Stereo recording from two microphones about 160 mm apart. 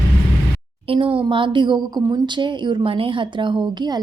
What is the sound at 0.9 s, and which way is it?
Speech, 35° right (ahead or behind).